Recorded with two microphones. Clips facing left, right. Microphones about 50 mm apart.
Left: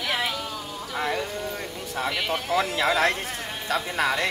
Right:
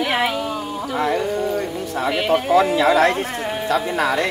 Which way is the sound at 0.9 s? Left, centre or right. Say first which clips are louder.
Right 7 dB; centre.